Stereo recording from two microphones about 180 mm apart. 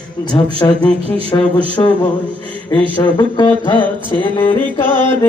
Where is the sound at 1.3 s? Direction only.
20° left (ahead or behind).